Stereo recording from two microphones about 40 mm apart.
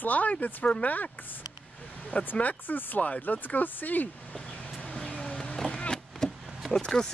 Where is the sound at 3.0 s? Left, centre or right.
Left.